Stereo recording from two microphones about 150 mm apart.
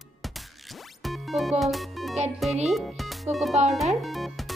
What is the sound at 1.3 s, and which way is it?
Speech, centre (ahead or behind).